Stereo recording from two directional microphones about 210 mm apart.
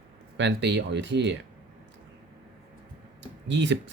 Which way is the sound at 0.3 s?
55° right (ahead or behind).